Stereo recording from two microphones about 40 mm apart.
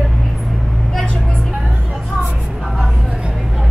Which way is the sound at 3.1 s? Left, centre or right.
Right.